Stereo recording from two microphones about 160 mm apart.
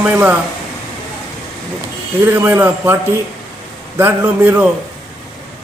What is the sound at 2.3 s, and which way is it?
Speech, 15° right (ahead or behind).